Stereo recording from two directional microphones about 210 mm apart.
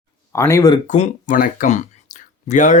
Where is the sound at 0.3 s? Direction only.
15° left (ahead or behind).